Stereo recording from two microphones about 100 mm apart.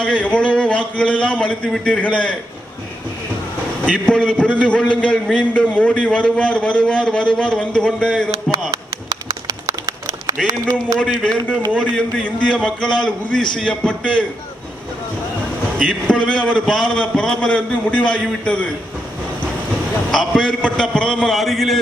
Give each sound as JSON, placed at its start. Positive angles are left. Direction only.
{"t": 0.0, "sound": "a sound", "side_deg": 10}
{"t": 0.9, "sound": "a man's voice", "side_deg": 10}
{"t": 3.9, "sound": "a man's voice", "side_deg": 10}
{"t": 8.7, "sound": "a sound", "side_deg": -35}
{"t": 10.9, "sound": "a man's voice", "side_deg": 0}
{"t": 11.2, "sound": "a man's voice", "side_deg": 10}
{"t": 15.8, "sound": "a man's voice", "side_deg": 10}
{"t": 20.1, "sound": "a man's voice", "side_deg": 5}